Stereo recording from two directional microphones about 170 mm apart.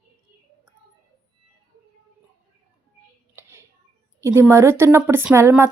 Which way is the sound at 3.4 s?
15° right (ahead or behind).